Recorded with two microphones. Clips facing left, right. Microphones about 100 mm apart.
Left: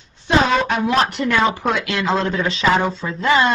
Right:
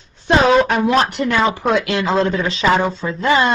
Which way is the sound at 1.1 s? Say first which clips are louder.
Right 1 dB; 30° right (ahead or behind).